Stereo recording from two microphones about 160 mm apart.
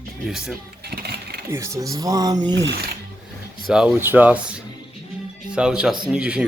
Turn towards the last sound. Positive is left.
turn(degrees=-5)  # may be behind; listen again after turning